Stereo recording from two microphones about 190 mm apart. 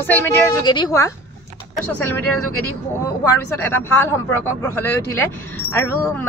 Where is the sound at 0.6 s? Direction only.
20° left (ahead or behind).